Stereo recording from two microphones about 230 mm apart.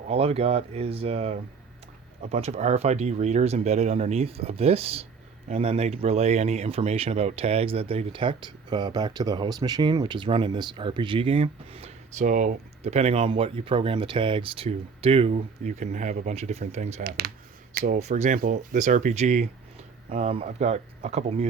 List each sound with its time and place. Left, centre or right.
0.1 s speech: right